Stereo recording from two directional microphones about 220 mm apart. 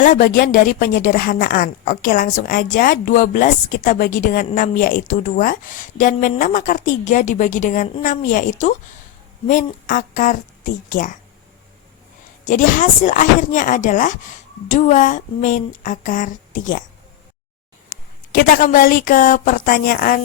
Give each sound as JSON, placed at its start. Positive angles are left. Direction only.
{"t": 0.0, "sound": "a woman's voice", "side_deg": 35}
{"t": 12.5, "sound": "a woman's voice", "side_deg": 35}
{"t": 18.3, "sound": "a woman's voice", "side_deg": 40}